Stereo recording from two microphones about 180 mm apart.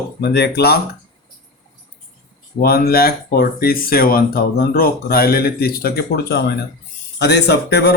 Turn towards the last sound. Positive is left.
turn(degrees=70)  # may be behind; listen again after turning